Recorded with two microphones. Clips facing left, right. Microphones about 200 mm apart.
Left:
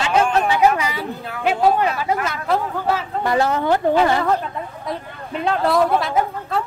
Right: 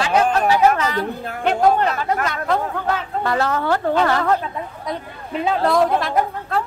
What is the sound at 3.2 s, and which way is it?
A woman's voice, 15° left (ahead or behind).